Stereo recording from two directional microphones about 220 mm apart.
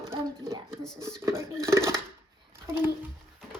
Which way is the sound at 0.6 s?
5° left (ahead or behind).